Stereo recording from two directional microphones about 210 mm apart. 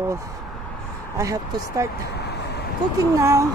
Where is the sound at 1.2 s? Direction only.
15° right (ahead or behind).